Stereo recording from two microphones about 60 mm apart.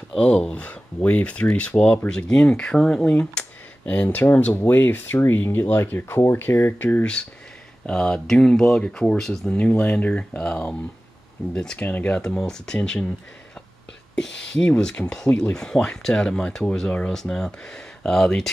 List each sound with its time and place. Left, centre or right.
0.2 s speech: centre
3.1 s speech: left
7.9 s speech: centre
9.5 s speech: left
12.4 s speech: centre
14.1 s speech: centre